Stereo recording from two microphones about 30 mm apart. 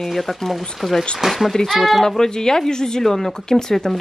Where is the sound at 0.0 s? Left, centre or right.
Centre.